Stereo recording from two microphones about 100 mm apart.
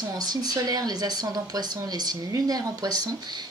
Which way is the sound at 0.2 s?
40° right (ahead or behind).